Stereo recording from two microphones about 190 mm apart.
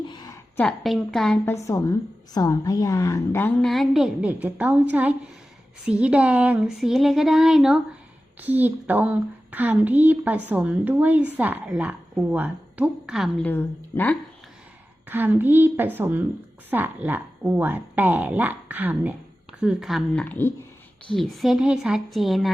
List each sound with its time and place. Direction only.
0.1 s a sound: 20° left (ahead or behind)
0.6 s speech: centre (ahead or behind)
1.5 s a woman's voice: 15° left (ahead or behind); by 13.3 s centre (ahead or behind)
13.4 s a woman's voice: 10° left (ahead or behind)
15.0 s a woman's voice: 10° right (ahead or behind)